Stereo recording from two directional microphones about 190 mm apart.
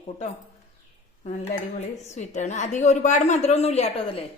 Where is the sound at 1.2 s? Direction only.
35° left (ahead or behind).